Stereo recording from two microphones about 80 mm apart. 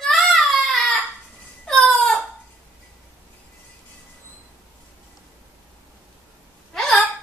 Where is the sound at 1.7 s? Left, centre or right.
Centre.